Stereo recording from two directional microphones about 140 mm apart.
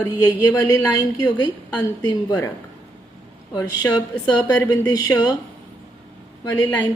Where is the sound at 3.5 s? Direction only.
30° left (ahead or behind).